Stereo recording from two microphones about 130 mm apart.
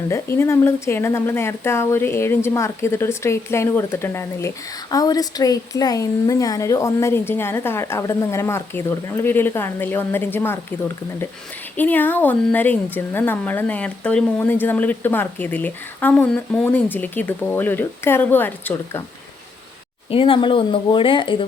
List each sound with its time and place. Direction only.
0.1 s a woman's voice: 20° left (ahead or behind)
20.1 s speech: 45° left (ahead or behind)